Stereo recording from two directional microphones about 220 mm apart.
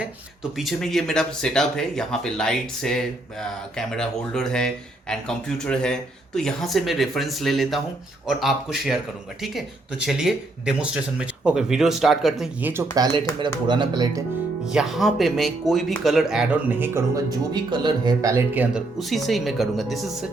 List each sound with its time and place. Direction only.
0.5 s speech: centre (ahead or behind)
13.4 s speech: 20° right (ahead or behind)
14.7 s speech: centre (ahead or behind)